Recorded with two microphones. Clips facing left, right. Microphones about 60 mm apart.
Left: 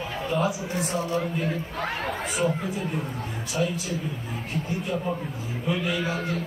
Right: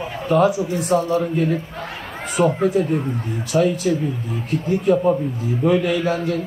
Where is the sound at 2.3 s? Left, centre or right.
Right.